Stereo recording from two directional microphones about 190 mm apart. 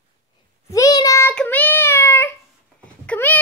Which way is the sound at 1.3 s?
5° left (ahead or behind).